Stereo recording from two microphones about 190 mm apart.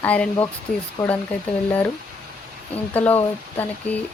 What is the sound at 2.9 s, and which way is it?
Speech, 10° left (ahead or behind).